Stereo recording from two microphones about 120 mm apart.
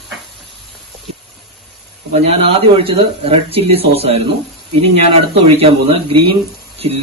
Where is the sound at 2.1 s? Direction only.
60° right (ahead or behind).